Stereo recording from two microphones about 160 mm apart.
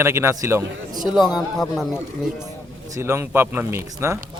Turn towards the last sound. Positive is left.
turn(degrees=-15)  # may be behind; listen again after turning